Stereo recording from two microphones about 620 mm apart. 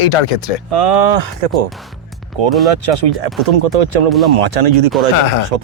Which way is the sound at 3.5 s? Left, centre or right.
Right.